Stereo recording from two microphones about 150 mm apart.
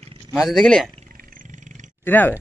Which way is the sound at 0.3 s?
Centre (ahead or behind).